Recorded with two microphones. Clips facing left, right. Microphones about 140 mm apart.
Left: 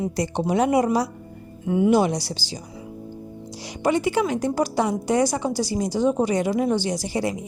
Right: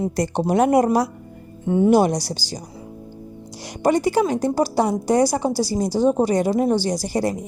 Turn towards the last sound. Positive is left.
turn(degrees=-40)  # may be behind; listen again after turning